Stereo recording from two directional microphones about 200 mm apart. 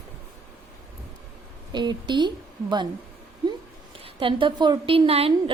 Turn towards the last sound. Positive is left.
turn(degrees=-30)  # may be behind; listen again after turning